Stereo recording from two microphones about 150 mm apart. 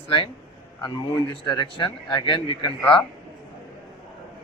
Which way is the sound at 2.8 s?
5° left (ahead or behind).